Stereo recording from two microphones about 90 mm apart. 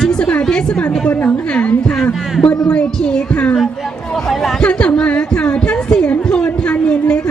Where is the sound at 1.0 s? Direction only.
15° left (ahead or behind).